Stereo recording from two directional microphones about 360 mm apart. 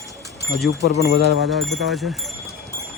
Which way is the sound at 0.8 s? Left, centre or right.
Left.